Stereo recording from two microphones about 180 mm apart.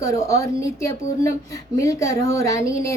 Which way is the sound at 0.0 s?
15° left (ahead or behind).